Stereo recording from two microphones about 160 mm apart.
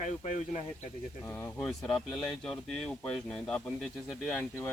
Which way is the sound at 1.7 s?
Centre (ahead or behind).